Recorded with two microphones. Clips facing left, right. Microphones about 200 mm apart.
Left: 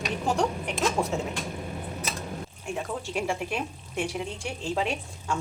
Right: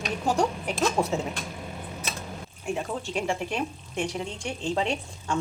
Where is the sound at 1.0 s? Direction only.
15° right (ahead or behind).